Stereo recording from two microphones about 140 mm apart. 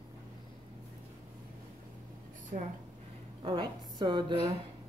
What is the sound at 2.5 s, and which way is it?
Speech, 65° right (ahead or behind).